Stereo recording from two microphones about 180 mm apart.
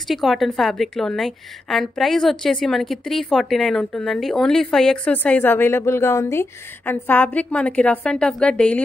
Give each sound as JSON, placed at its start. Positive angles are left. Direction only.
{"t": 0.1, "sound": "a woman's voice", "side_deg": 0}